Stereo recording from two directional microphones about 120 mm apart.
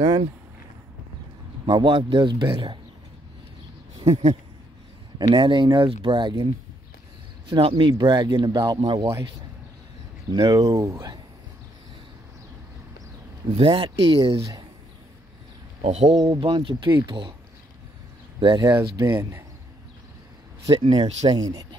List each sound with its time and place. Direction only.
1.7 s speech: 40° right (ahead or behind)
4.0 s speech: 65° right (ahead or behind)
5.3 s speech: 40° right (ahead or behind)
7.4 s speech: 45° right (ahead or behind)
10.3 s speech: 30° right (ahead or behind)
13.6 s speech: 50° right (ahead or behind)
15.8 s speech: 65° right (ahead or behind)
16.3 s speech: 40° right (ahead or behind)
18.4 s speech: 40° right (ahead or behind)
18.8 s speech: 25° right (ahead or behind)
20.7 s speech: 45° right (ahead or behind)
21.3 s speech: 30° right (ahead or behind)